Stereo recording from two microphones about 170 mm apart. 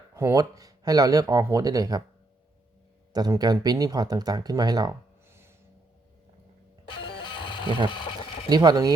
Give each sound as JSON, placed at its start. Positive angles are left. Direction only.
{"t": 0.1, "sound": "speech", "side_deg": -20}
{"t": 3.1, "sound": "speech", "side_deg": -25}
{"t": 7.4, "sound": "a sound", "side_deg": 30}
{"t": 8.4, "sound": "speech", "side_deg": -25}